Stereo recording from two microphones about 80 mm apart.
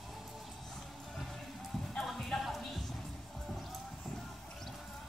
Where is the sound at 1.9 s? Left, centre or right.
Centre.